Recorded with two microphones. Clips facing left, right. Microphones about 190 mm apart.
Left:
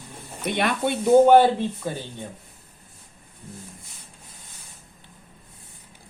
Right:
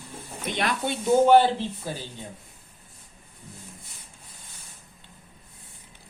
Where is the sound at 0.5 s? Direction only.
55° left (ahead or behind).